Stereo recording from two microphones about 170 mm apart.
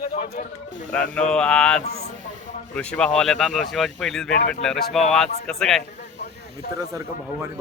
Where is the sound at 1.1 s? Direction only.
5° left (ahead or behind).